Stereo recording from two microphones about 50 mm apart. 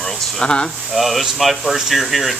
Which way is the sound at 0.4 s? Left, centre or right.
Centre.